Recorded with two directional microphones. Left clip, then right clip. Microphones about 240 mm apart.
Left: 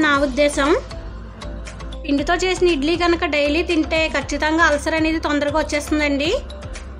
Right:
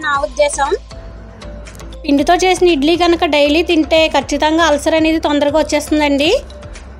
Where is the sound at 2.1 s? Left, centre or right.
Centre.